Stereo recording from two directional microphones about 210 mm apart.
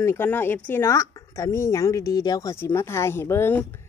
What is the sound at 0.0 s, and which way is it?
Speech, 10° left (ahead or behind).